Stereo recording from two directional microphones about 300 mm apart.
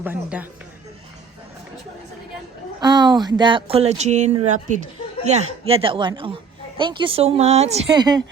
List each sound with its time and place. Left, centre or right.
0.0 s speech: centre
2.8 s a woman's voice: centre